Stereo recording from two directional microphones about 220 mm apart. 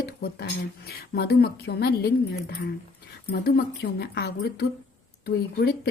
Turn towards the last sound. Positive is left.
turn(degrees=45)  # may be behind; listen again after turning